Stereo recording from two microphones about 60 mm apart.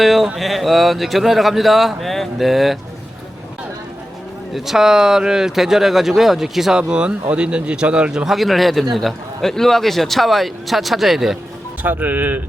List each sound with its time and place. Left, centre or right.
0.0 s speech: centre
4.5 s speech: centre
11.8 s speech: right